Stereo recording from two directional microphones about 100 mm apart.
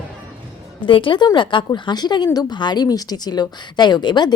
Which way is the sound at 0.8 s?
55° left (ahead or behind).